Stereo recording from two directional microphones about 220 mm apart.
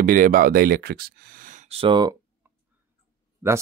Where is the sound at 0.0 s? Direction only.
40° right (ahead or behind); by 2.1 s 20° right (ahead or behind).